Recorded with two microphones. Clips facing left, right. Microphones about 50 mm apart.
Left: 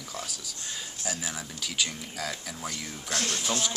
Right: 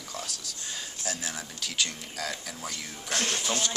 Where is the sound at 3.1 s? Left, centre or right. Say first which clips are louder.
Right 1 dB; right.